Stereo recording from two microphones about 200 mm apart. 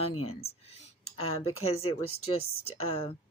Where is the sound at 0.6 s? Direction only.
30° left (ahead or behind).